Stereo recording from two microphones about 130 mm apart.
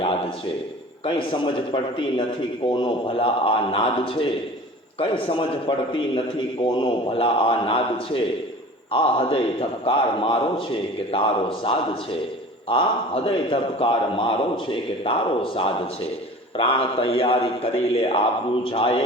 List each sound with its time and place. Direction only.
1.0 s a man's voice: 40° left (ahead or behind)